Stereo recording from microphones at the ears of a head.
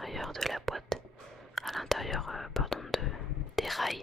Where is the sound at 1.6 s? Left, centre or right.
Centre.